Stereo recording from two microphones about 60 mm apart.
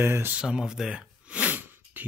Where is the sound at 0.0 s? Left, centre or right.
Right.